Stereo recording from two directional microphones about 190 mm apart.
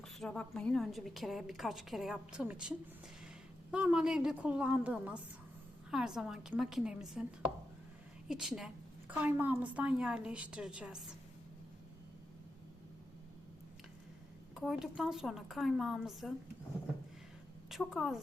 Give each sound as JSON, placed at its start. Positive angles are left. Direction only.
{"t": 0.0, "sound": "a woman's voice", "side_deg": 5}
{"t": 14.5, "sound": "a woman's voice", "side_deg": 0}
{"t": 17.7, "sound": "a woman's voice", "side_deg": 0}